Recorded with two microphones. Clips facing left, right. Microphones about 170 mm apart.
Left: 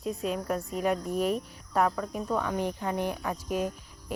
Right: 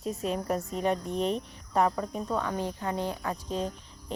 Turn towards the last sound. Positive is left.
turn(degrees=10)  # may be behind; listen again after turning